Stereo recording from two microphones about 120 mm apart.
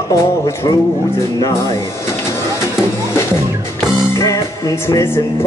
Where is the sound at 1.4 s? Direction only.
30° left (ahead or behind).